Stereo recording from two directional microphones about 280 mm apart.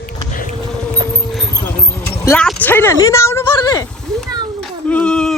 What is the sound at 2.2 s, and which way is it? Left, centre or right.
Speech, centre.